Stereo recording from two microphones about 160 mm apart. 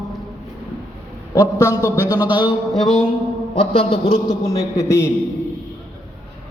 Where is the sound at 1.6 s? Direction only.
20° left (ahead or behind).